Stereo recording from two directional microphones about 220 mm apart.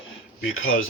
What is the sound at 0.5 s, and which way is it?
Speech, 65° left (ahead or behind).